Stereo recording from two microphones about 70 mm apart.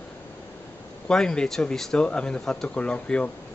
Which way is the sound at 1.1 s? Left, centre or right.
Centre.